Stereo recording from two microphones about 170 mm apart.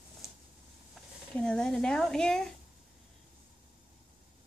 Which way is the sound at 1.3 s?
5° left (ahead or behind).